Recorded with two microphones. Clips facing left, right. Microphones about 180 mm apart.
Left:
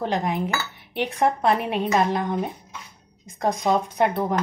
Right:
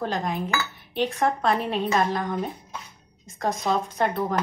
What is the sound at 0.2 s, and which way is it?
A woman's voice, 15° left (ahead or behind).